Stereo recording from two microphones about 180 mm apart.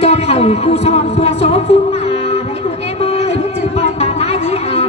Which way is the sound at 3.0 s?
35° left (ahead or behind).